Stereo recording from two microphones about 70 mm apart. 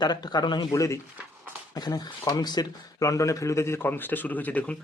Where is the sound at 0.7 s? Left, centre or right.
Left.